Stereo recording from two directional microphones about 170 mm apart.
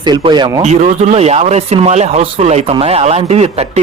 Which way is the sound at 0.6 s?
40° right (ahead or behind).